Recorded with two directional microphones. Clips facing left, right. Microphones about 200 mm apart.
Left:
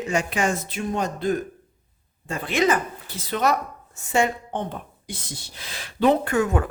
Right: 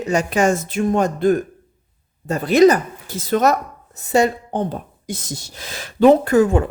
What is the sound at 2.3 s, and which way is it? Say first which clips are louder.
Speech: right 9 dB; 40° right (ahead or behind).